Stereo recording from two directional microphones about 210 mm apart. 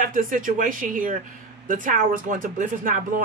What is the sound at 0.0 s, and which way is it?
A man's voice, 40° right (ahead or behind).